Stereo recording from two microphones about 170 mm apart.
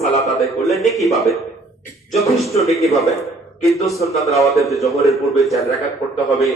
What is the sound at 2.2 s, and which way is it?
Speech, 20° left (ahead or behind).